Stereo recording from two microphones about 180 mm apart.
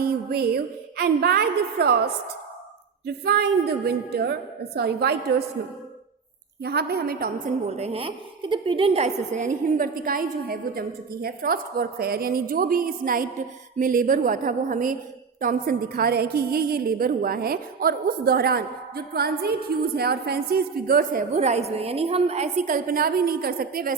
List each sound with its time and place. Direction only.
0.0 s a woman's voice: 60° right (ahead or behind)
3.2 s a woman's voice: 60° right (ahead or behind)
6.6 s a woman's voice: 65° right (ahead or behind)
7.7 s a woman's voice: 35° right (ahead or behind); by 24.0 s 55° right (ahead or behind)